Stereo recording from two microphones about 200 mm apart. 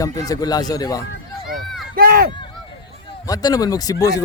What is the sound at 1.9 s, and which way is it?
Run, 50° right (ahead or behind).